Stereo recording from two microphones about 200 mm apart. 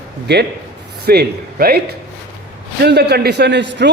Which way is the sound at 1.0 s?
50° right (ahead or behind).